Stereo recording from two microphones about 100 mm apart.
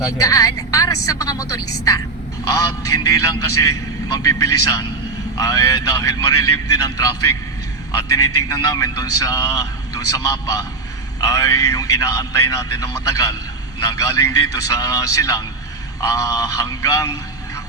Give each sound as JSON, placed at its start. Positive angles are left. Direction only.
{"t": 0.0, "sound": "a man's voice", "side_deg": 35}